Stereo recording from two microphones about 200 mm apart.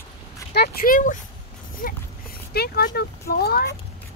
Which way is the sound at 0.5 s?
45° left (ahead or behind).